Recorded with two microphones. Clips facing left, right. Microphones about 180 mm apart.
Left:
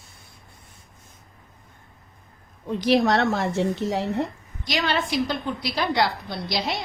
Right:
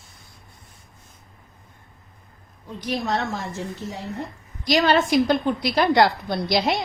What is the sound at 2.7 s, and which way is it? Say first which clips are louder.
A woman's voice: left 6 dB; 90° left.